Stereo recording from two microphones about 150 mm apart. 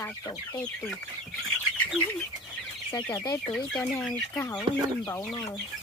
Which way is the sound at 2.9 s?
20° left (ahead or behind).